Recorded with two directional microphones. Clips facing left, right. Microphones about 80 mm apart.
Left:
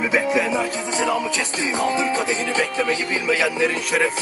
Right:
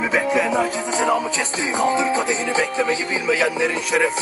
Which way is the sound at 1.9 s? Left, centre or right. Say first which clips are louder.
Right 2 dB; right.